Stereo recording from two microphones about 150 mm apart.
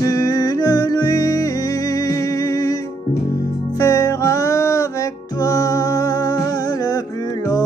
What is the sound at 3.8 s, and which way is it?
Music, 20° left (ahead or behind).